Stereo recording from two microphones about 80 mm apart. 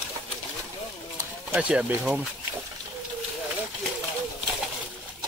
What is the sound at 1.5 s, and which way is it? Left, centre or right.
Speech, centre.